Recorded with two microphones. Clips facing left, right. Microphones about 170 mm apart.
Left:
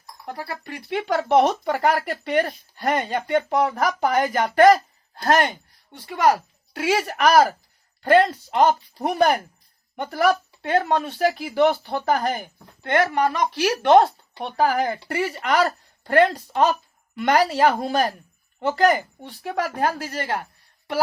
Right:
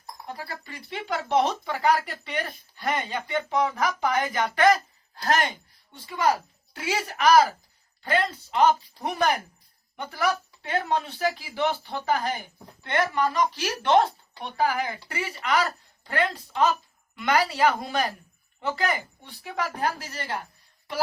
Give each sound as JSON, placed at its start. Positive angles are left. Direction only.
{"t": 0.3, "sound": "speech", "side_deg": 65}
{"t": 5.9, "sound": "a woman's voice", "side_deg": 60}